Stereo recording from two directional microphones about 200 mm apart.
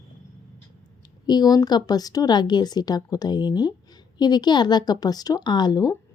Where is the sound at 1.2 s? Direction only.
20° left (ahead or behind).